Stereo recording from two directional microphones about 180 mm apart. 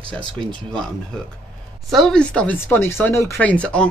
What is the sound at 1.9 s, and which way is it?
Speech, 5° left (ahead or behind).